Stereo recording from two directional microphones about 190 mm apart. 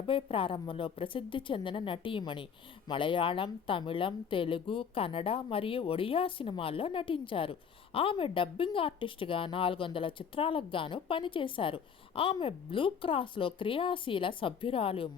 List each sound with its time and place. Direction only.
0.1 s a woman's voice: 30° left (ahead or behind)